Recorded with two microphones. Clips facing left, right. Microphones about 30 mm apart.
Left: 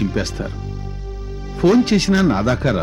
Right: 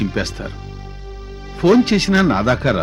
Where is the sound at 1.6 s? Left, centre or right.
Right.